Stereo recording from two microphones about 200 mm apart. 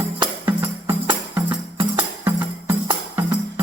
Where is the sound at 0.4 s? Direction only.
10° right (ahead or behind).